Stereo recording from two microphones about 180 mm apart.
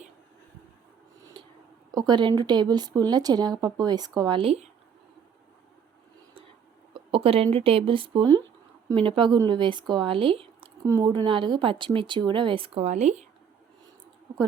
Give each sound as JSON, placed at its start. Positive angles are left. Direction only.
{"t": 1.2, "sound": "a sound", "side_deg": -25}
{"t": 2.0, "sound": "speech", "side_deg": -25}
{"t": 6.9, "sound": "speech", "side_deg": -30}